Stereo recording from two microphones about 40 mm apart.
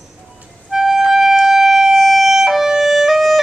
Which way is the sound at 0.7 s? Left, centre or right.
Centre.